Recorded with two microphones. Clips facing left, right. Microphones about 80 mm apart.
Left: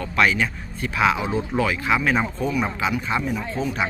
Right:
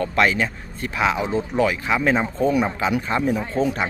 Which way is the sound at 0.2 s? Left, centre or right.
Right.